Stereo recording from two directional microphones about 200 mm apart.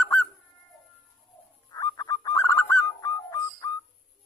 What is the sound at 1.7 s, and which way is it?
Bird, 20° left (ahead or behind).